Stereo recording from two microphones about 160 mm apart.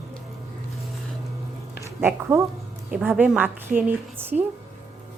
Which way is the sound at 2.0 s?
15° right (ahead or behind).